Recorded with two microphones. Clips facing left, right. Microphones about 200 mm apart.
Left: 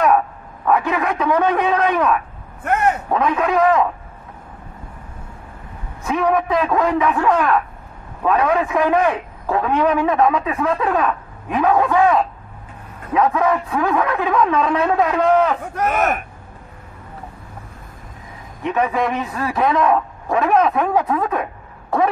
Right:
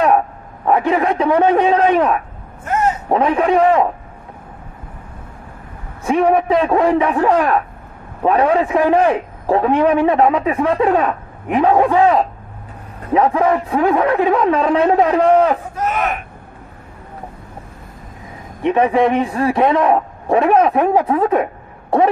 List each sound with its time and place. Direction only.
0.7 s a man's voice: 30° right (ahead or behind)
2.6 s a sound: 60° left (ahead or behind)
3.1 s a man's voice: 30° right (ahead or behind)
6.0 s a man's voice: 30° right (ahead or behind)
15.9 s speech: 45° left (ahead or behind)
18.6 s a man's voice: 30° right (ahead or behind)